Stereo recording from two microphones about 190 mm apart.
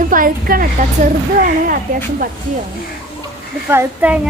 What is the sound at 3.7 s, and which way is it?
Speech, 10° right (ahead or behind).